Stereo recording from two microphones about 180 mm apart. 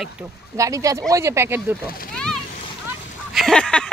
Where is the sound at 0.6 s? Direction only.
20° right (ahead or behind).